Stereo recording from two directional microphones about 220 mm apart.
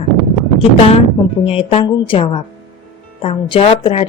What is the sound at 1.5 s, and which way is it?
A woman's voice, 25° left (ahead or behind).